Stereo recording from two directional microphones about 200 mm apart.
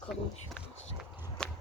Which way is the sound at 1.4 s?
5° left (ahead or behind).